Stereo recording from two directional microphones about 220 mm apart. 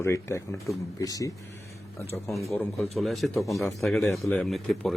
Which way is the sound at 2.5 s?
5° left (ahead or behind).